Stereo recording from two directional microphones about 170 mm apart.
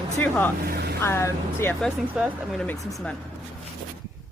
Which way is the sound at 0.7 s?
70° right (ahead or behind).